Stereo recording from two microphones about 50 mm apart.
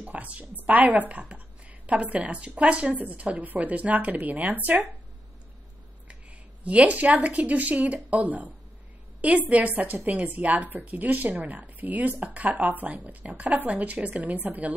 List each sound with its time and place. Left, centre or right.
0.0 s a woman's voice: right
6.6 s speech: right